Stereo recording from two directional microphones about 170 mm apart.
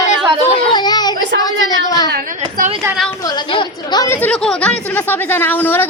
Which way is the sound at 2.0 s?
65° right (ahead or behind).